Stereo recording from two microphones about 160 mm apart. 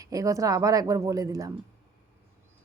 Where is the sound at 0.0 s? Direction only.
20° right (ahead or behind).